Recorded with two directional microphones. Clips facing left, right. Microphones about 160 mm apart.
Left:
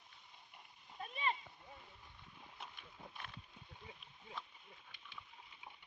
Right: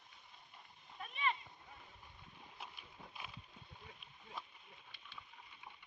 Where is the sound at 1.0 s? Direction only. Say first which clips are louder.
Even; 35° left (ahead or behind).